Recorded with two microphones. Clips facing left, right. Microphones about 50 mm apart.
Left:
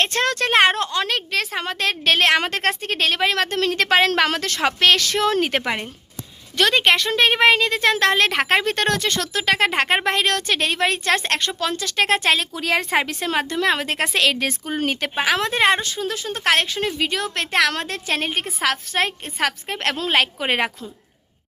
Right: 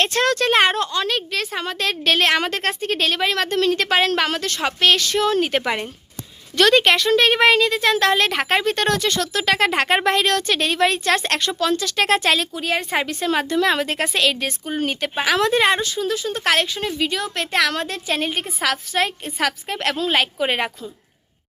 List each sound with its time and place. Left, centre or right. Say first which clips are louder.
0.1 s speech: right 2 dB; left
0.3 s speech: left 3 dB; left
0.9 s a woman's voice: even; left
6.6 s speech: right 3 dB; centre
6.9 s speech: right 2 dB; left
7.7 s speech: even; left
9.5 s speech: even; left
12.5 s a woman's voice: left 1 dB; left
13.1 s speech: right 2 dB; left
13.4 s speech: right 1 dB; left
13.8 s a woman's voice: even; left
15.1 s speech: right 4 dB; left